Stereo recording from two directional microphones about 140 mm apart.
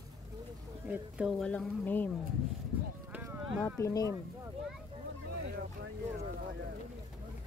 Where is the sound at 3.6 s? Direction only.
20° left (ahead or behind).